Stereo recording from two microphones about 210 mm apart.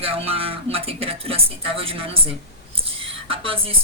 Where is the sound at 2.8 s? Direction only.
25° right (ahead or behind).